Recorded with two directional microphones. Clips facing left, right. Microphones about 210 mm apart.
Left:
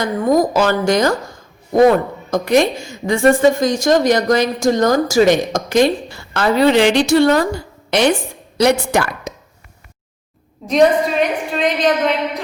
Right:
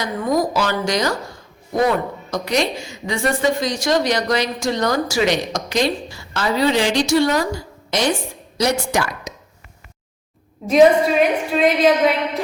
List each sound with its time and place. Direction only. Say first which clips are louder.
0.0 s a woman's voice: left 5 dB; 50° left (ahead or behind)
10.7 s a woman's voice: right 1 dB; 5° right (ahead or behind)